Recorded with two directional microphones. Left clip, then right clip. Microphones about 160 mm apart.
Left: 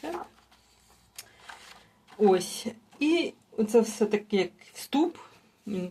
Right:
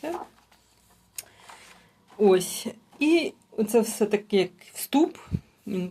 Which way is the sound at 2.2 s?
35° right (ahead or behind).